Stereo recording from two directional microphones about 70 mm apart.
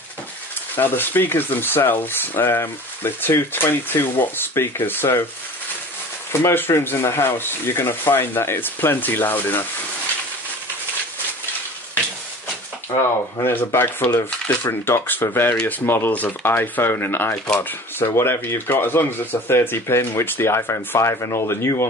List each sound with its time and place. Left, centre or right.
0.7 s speech: left
6.4 s speech: left
12.9 s speech: left